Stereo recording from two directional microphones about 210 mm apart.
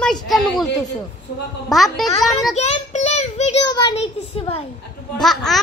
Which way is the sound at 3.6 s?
20° left (ahead or behind).